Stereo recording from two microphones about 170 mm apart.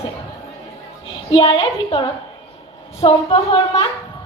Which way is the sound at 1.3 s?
30° left (ahead or behind).